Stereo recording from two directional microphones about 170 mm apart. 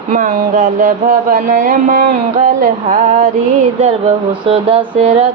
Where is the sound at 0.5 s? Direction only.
45° right (ahead or behind).